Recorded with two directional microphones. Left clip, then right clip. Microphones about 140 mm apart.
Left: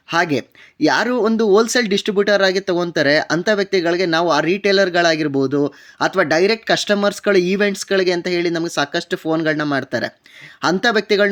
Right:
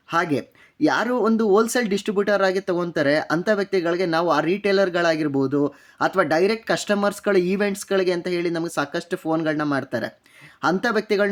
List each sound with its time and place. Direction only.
0.1 s speech: 20° left (ahead or behind)